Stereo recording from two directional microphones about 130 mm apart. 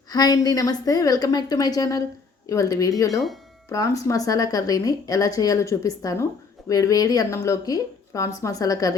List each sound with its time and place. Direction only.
0.1 s speech: 30° left (ahead or behind)